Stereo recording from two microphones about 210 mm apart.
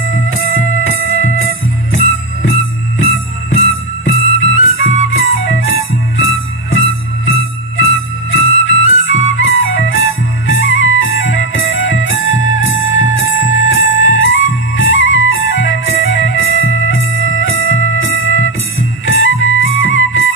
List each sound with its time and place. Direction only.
0.3 s music: 70° left (ahead or behind)
3.5 s music: 65° left (ahead or behind)